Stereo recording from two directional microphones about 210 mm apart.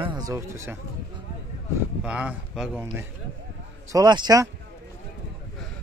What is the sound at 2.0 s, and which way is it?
A man's voice, 5° right (ahead or behind).